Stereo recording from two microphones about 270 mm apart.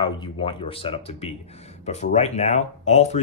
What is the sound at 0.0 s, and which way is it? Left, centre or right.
Speech, centre.